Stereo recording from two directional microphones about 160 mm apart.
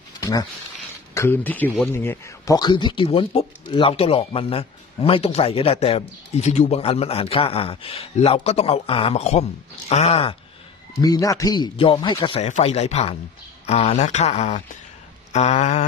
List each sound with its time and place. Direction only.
0.2 s a sound: 20° left (ahead or behind)
1.1 s speech: 15° left (ahead or behind); by 10.3 s 40° left (ahead or behind)
11.0 s a man's voice: 25° left (ahead or behind)
12.4 s speech: 45° left (ahead or behind)